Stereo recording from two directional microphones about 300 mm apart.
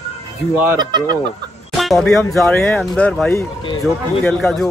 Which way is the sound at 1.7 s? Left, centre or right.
Centre.